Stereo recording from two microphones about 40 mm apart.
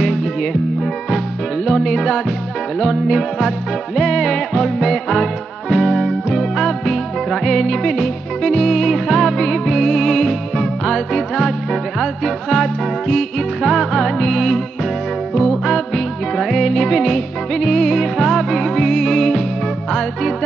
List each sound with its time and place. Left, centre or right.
0.0 s music: centre
1.7 s music: centre
13.6 s music: centre
16.3 s music: centre
17.0 s music: centre